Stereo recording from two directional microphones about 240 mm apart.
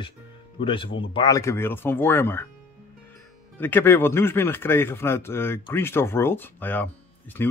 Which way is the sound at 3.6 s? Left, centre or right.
Centre.